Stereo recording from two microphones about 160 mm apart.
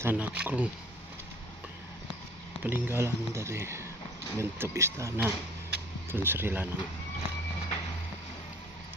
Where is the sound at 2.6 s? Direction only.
10° right (ahead or behind).